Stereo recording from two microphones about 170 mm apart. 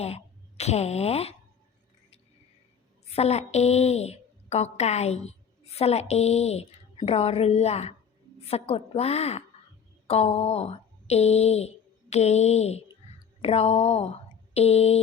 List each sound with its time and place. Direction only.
0.0 s speech: 40° left (ahead or behind)
3.1 s a woman's voice: 40° left (ahead or behind)